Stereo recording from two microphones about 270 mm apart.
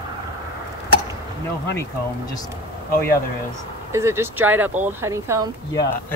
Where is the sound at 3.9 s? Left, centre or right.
Centre.